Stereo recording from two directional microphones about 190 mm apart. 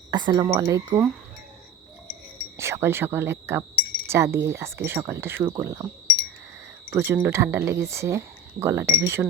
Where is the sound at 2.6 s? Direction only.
15° right (ahead or behind).